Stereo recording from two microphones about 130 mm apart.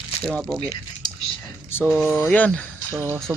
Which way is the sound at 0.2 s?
10° left (ahead or behind).